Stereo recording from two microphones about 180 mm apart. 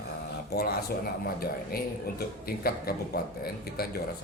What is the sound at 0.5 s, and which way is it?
A man's voice, 65° left (ahead or behind).